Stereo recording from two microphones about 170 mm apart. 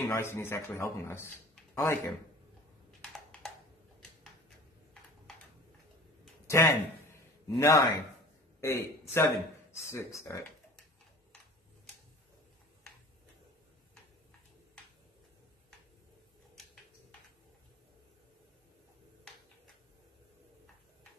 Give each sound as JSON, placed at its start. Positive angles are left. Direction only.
{"t": 0.0, "sound": "speech", "side_deg": 15}
{"t": 3.0, "sound": "a sound", "side_deg": 5}
{"t": 6.5, "sound": "a man's voice", "side_deg": 15}